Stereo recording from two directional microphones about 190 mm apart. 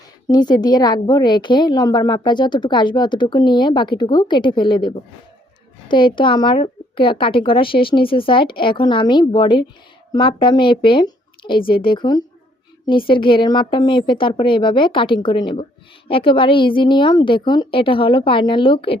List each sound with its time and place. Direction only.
0.3 s a woman's voice: 20° left (ahead or behind)